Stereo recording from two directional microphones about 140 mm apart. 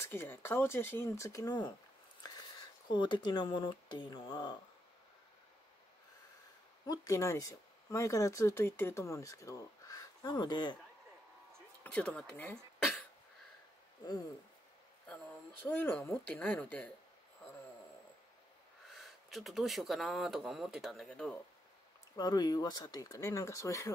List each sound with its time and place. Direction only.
0.0 s speech: 15° left (ahead or behind)
2.9 s speech: 35° left (ahead or behind)
6.9 s speech: 20° left (ahead or behind)
11.8 s speech: 10° left (ahead or behind)
15.6 s speech: 15° left (ahead or behind)
19.3 s speech: centre (ahead or behind)
22.1 s speech: 30° left (ahead or behind)